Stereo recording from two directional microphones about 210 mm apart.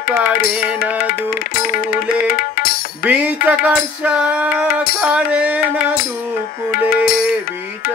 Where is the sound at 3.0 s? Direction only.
5° right (ahead or behind).